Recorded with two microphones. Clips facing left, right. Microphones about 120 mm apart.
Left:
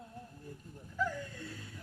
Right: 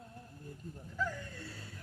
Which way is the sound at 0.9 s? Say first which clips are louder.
Left 3 dB; 10° left (ahead or behind).